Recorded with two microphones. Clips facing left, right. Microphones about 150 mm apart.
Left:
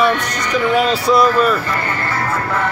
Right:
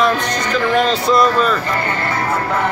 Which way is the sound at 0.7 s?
5° left (ahead or behind).